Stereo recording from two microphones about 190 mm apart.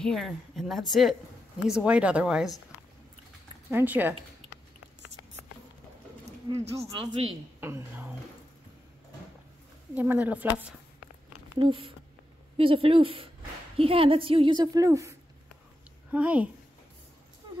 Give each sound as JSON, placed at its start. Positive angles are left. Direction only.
{"t": 0.0, "sound": "speech", "side_deg": 0}
{"t": 3.7, "sound": "a woman's voice", "side_deg": -10}
{"t": 6.6, "sound": "speech", "side_deg": -35}
{"t": 7.6, "sound": "speech", "side_deg": -10}
{"t": 9.9, "sound": "a woman's voice", "side_deg": -10}
{"t": 11.5, "sound": "a woman's voice", "side_deg": -25}